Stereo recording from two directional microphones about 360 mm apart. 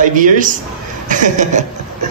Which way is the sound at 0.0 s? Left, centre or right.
Right.